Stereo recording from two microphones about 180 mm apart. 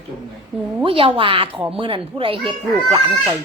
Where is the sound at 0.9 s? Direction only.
30° right (ahead or behind).